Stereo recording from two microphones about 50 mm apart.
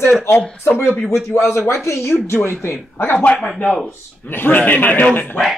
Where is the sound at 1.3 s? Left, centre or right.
Left.